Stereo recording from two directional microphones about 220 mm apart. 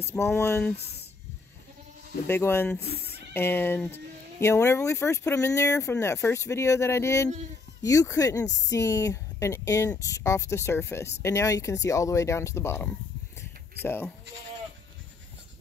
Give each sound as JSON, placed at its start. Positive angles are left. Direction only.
{"t": 0.1, "sound": "speech", "side_deg": 10}
{"t": 0.7, "sound": "speech", "side_deg": 50}
{"t": 2.2, "sound": "speech", "side_deg": 10}
{"t": 2.8, "sound": "speech", "side_deg": 45}
{"t": 3.3, "sound": "speech", "side_deg": 10}